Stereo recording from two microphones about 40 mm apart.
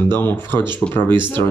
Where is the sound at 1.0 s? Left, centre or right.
Left.